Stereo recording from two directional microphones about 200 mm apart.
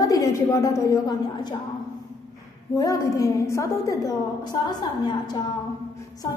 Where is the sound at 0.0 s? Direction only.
15° left (ahead or behind).